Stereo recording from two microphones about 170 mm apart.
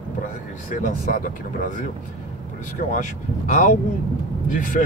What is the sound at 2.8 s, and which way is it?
Speech, 50° left (ahead or behind).